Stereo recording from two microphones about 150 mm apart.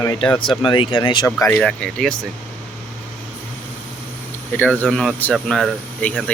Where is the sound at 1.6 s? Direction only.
5° left (ahead or behind).